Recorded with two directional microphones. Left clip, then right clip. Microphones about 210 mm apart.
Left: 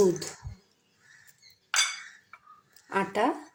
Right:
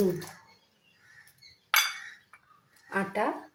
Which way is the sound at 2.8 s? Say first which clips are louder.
Left 3 dB; 35° left (ahead or behind).